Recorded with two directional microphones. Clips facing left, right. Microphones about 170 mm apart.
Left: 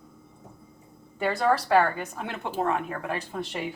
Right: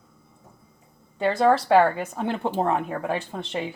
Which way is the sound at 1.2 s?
25° right (ahead or behind).